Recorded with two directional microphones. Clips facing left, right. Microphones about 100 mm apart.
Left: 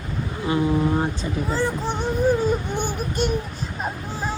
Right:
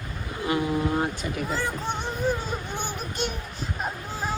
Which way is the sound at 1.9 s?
50° left (ahead or behind).